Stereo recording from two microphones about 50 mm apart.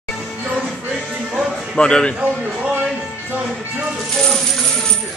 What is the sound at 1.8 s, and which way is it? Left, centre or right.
Speech, centre.